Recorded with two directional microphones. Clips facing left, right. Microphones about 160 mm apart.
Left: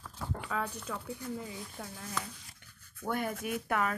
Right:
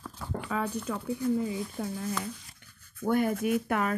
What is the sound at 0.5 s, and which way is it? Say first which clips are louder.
Speech: right 6 dB; 10° right (ahead or behind).